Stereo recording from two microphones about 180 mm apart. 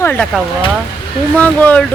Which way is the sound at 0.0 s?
10° left (ahead or behind).